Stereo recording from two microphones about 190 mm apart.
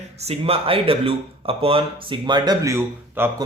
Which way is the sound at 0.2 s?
30° right (ahead or behind).